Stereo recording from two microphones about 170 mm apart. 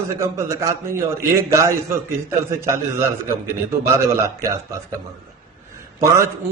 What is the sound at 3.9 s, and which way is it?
A man's voice, 20° right (ahead or behind).